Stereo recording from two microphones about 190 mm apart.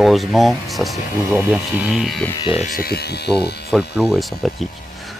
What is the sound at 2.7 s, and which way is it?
Speech, 50° left (ahead or behind).